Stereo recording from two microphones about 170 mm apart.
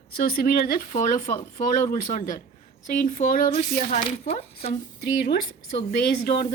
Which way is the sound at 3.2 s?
55° left (ahead or behind).